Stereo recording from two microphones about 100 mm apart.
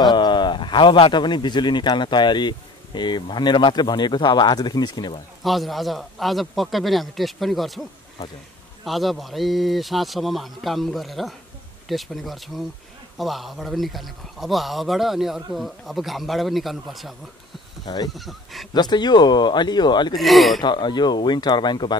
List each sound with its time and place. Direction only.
0.0 s speech: 50° left (ahead or behind)
5.4 s speech: centre (ahead or behind)
8.8 s speech: centre (ahead or behind)
17.8 s speech: 40° left (ahead or behind)
18.1 s speech: centre (ahead or behind)
18.7 s speech: 45° left (ahead or behind)
20.2 s speech: centre (ahead or behind)
20.6 s speech: 50° left (ahead or behind)